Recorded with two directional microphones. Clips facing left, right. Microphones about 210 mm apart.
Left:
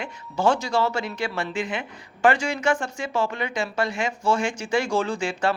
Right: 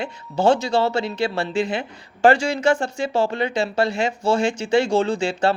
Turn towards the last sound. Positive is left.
turn(degrees=-25)  # may be behind; listen again after turning